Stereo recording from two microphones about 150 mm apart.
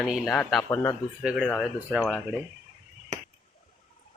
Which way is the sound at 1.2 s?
5° right (ahead or behind).